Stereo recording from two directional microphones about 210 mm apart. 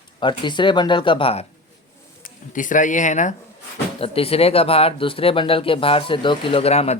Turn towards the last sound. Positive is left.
turn(degrees=30)  # may be behind; listen again after turning